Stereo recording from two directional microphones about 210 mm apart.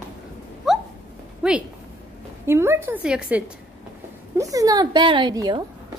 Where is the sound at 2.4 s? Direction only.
10° right (ahead or behind).